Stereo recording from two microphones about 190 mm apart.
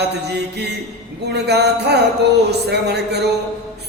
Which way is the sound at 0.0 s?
60° right (ahead or behind).